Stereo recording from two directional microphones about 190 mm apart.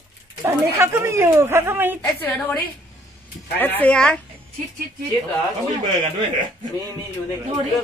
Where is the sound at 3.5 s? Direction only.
10° left (ahead or behind).